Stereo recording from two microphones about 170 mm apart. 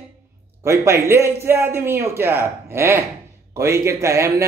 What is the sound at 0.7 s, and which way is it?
A man's voice, 15° right (ahead or behind).